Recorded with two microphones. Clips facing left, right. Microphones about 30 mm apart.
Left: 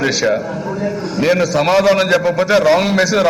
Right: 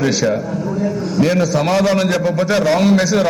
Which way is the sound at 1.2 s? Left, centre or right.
Centre.